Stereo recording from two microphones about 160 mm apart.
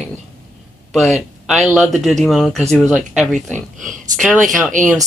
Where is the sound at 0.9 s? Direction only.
Centre (ahead or behind).